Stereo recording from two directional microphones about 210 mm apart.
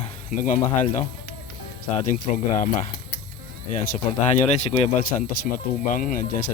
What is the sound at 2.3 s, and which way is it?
Speech, 30° left (ahead or behind).